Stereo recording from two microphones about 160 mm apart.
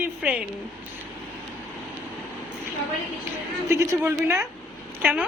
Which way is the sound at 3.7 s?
15° right (ahead or behind).